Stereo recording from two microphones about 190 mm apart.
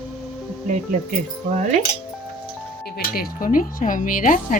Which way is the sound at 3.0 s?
45° left (ahead or behind).